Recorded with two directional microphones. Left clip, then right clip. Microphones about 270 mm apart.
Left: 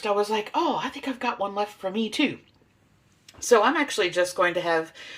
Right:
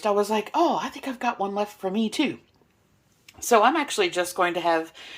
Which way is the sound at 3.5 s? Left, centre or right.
Centre.